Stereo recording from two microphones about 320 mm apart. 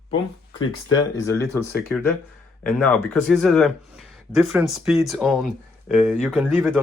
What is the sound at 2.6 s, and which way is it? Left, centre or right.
Speech, centre.